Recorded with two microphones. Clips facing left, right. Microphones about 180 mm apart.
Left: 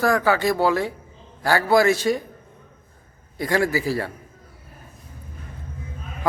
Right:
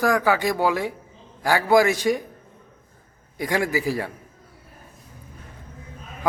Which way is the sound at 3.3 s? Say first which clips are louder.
Left 2 dB; 15° right (ahead or behind).